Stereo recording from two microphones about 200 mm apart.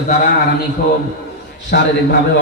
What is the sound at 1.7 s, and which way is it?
Speech, 50° left (ahead or behind).